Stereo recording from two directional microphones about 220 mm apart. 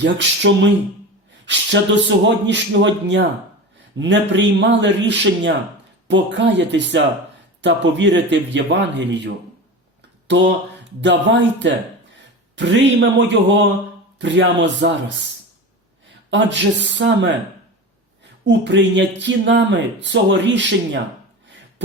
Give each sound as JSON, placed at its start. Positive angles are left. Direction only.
{"t": 0.0, "sound": "speech", "side_deg": -55}
{"t": 16.3, "sound": "speech", "side_deg": -55}
{"t": 18.4, "sound": "speech", "side_deg": -55}